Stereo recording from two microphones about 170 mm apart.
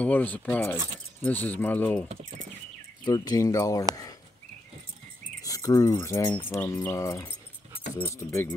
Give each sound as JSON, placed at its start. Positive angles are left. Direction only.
{"t": 0.0, "sound": "speech", "side_deg": 10}
{"t": 3.1, "sound": "speech", "side_deg": 20}
{"t": 5.4, "sound": "a sound", "side_deg": 20}
{"t": 6.0, "sound": "speech", "side_deg": 15}